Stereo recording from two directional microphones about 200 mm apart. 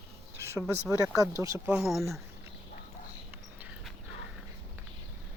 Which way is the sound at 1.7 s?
Centre (ahead or behind).